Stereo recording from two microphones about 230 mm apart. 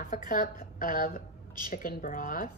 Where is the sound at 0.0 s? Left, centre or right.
Left.